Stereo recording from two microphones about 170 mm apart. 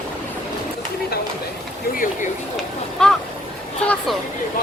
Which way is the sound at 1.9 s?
55° left (ahead or behind).